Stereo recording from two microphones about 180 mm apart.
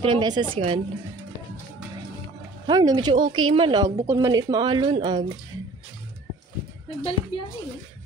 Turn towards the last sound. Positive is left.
turn(degrees=30)  # may be behind; listen again after turning